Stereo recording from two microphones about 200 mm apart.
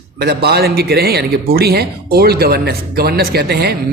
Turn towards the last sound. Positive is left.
turn(degrees=-50)  # may be behind; listen again after turning